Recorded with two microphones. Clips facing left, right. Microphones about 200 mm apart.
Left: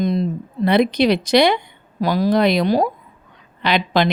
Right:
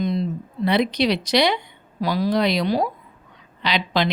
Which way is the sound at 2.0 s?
50° left (ahead or behind).